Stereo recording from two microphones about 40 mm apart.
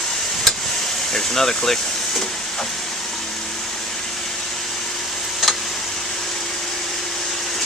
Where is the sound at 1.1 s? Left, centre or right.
Centre.